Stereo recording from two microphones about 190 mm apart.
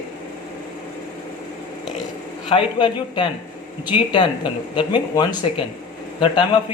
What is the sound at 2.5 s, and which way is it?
Speech, 25° left (ahead or behind).